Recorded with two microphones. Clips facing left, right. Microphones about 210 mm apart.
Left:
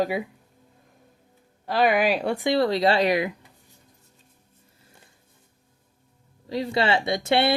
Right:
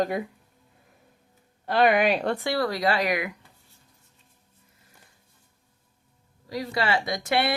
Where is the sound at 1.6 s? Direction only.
Centre (ahead or behind); by 3.3 s 25° left (ahead or behind).